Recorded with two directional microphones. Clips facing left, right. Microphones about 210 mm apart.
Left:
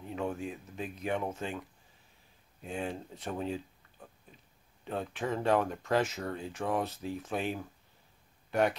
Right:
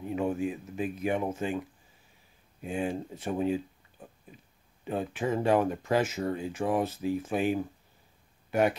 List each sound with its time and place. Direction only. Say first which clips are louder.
0.0 s speech: right 6 dB; 10° right (ahead or behind)
2.6 s speech: right 5 dB; 5° right (ahead or behind)
4.8 s speech: right 4 dB; 5° right (ahead or behind)